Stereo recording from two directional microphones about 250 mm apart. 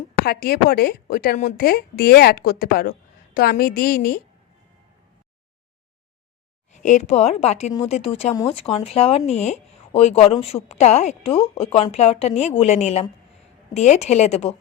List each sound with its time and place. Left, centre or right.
0.3 s speech: left
6.8 s speech: left